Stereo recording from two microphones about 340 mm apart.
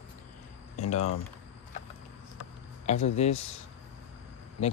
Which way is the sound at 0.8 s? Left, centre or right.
Centre.